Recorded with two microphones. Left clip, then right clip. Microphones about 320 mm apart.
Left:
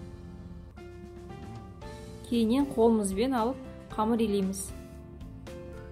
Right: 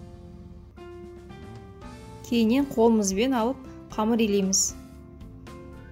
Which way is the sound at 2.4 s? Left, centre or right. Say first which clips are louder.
Right 3 dB; right.